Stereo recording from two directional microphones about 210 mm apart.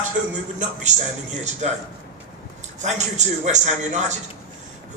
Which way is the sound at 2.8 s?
35° right (ahead or behind).